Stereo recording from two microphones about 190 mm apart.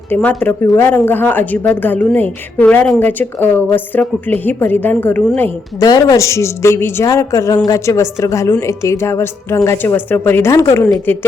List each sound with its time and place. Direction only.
0.1 s a woman's voice: 10° left (ahead or behind)